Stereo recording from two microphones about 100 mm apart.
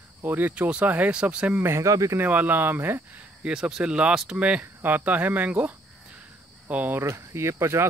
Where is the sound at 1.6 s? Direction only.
30° right (ahead or behind).